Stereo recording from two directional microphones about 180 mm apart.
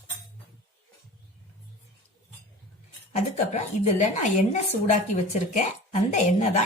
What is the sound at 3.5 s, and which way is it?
A woman's voice, 40° left (ahead or behind).